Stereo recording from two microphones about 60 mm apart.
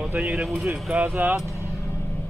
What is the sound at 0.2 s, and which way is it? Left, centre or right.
Speech, centre.